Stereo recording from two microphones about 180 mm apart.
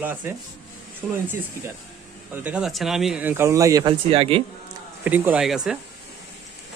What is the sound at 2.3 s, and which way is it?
Speech, 10° right (ahead or behind).